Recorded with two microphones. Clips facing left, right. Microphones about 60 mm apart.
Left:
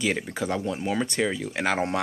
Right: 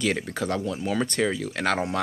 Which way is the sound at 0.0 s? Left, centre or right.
Centre.